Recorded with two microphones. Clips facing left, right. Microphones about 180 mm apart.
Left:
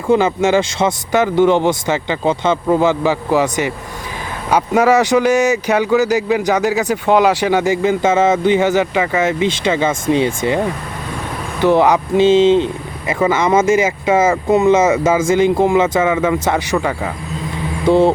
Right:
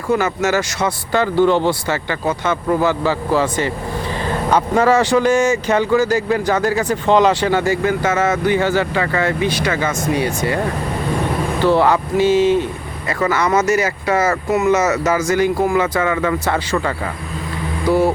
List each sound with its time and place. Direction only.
0.1 s speech: 25° left (ahead or behind)
11.6 s speech: 15° left (ahead or behind)
17.8 s a sound: 25° left (ahead or behind)